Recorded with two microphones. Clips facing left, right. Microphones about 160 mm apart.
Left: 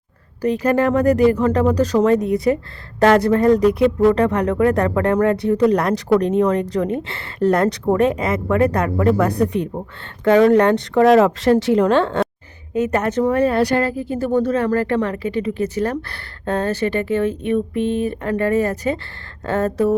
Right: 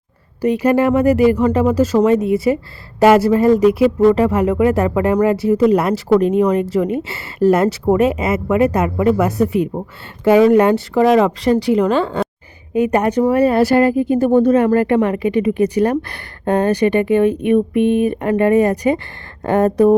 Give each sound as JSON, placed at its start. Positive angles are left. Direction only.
{"t": 0.4, "sound": "speech", "side_deg": -10}
{"t": 12.7, "sound": "speech", "side_deg": -10}